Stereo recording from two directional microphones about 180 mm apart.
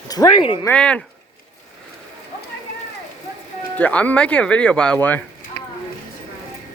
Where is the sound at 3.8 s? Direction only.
10° left (ahead or behind).